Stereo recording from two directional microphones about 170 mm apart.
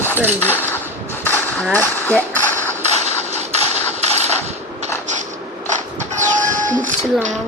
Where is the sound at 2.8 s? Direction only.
40° right (ahead or behind).